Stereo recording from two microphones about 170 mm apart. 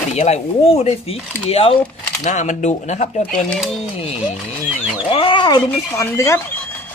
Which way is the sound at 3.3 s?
5° left (ahead or behind).